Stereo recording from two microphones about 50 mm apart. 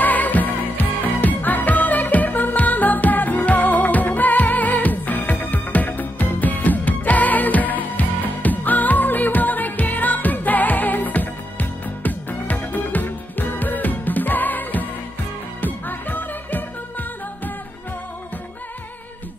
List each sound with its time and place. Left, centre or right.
0.0 s music: left